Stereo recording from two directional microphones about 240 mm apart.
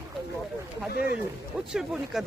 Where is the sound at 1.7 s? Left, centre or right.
Centre.